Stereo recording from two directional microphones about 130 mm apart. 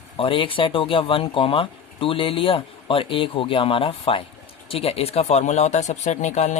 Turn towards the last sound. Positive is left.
turn(degrees=65)  # may be behind; listen again after turning